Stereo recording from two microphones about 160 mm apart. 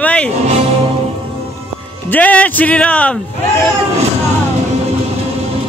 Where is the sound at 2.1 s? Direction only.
10° left (ahead or behind).